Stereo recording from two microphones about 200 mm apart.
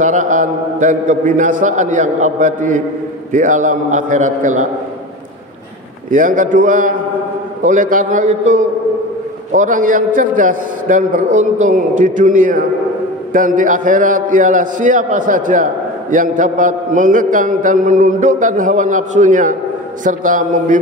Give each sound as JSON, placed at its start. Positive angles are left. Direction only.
{"t": 0.0, "sound": "a man's voice", "side_deg": -40}
{"t": 6.0, "sound": "a man's voice", "side_deg": -40}